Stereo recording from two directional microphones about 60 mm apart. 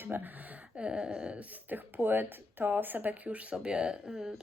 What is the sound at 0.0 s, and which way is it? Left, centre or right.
Speech, right.